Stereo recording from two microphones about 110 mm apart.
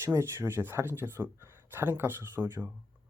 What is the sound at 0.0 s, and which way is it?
Speech, 25° right (ahead or behind).